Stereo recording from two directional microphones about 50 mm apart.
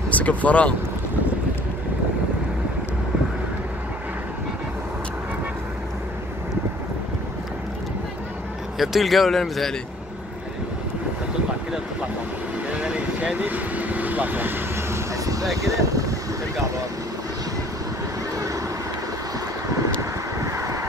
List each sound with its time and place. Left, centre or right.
0.1 s speech: left
8.7 s speech: centre
12.7 s vehicle: right
15.5 s speech: right
20.0 s vehicle: right